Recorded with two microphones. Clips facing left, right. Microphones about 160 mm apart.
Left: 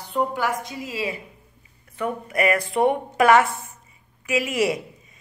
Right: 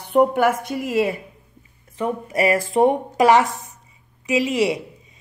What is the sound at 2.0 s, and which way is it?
Speech, 30° right (ahead or behind).